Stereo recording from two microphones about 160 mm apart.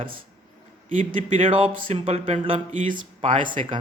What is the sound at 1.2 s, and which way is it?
Speech, 35° right (ahead or behind).